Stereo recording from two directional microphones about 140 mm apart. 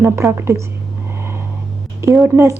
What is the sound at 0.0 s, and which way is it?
Speech, 15° right (ahead or behind).